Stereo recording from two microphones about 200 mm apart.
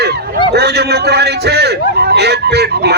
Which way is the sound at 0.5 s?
55° right (ahead or behind).